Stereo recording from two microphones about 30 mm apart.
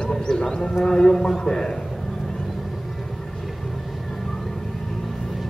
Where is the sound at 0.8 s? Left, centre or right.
Centre.